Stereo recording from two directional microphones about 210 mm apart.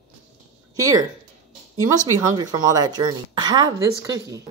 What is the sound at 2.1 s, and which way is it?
A woman's voice, 15° right (ahead or behind).